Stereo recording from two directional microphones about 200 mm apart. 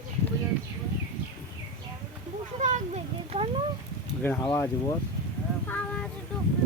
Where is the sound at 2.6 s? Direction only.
40° right (ahead or behind).